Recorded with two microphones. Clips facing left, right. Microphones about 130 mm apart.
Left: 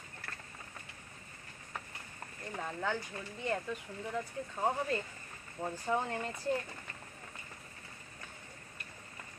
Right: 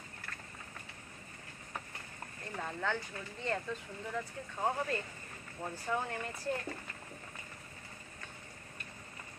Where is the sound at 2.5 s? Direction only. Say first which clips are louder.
Even; 15° left (ahead or behind).